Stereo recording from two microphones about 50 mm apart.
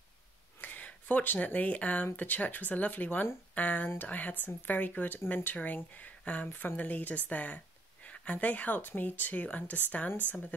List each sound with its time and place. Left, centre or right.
0.6 s speech: left